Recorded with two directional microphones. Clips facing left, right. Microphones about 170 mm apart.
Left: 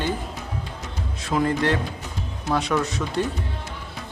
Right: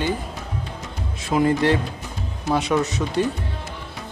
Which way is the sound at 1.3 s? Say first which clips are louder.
Right 3 dB; 15° right (ahead or behind).